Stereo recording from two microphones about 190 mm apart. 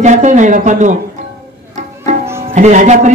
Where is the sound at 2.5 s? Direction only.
40° right (ahead or behind).